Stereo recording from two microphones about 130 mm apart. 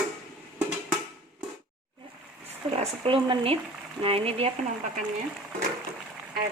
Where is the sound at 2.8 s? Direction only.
40° right (ahead or behind).